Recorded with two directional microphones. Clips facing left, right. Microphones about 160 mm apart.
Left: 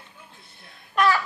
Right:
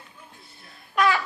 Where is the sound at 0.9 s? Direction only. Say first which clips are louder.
Left 1 dB; 15° right (ahead or behind).